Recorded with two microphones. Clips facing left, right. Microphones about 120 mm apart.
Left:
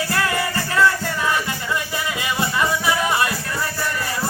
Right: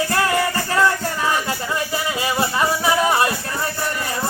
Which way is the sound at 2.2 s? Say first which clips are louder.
Right 1 dB; 30° right (ahead or behind).